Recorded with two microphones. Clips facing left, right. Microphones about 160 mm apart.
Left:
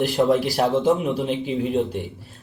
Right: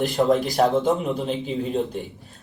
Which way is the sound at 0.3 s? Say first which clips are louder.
Even; 5° left (ahead or behind).